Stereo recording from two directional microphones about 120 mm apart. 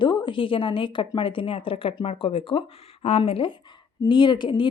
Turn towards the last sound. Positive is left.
turn(degrees=40)  # may be behind; listen again after turning